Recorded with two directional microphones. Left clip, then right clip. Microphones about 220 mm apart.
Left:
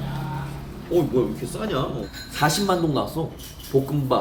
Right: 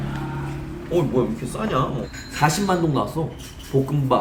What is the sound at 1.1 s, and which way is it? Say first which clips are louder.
A man's voice: right 1 dB; 5° left (ahead or behind).